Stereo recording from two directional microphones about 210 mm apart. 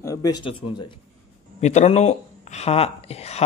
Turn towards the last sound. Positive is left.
turn(degrees=30)  # may be behind; listen again after turning